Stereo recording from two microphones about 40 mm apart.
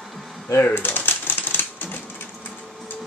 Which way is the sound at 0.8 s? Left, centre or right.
Left.